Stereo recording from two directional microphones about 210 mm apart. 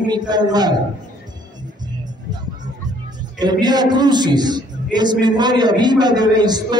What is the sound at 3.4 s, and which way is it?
A man's voice, 20° right (ahead or behind).